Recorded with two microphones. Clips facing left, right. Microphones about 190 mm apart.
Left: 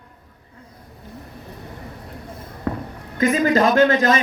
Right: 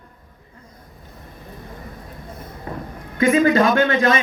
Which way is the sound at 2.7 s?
70° left (ahead or behind).